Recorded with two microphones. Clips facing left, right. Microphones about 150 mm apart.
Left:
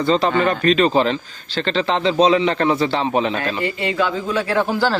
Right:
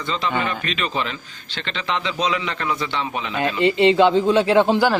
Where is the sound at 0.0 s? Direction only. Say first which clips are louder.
Left 7 dB; 35° left (ahead or behind).